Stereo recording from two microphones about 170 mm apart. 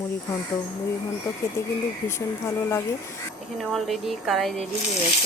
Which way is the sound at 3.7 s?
Centre (ahead or behind).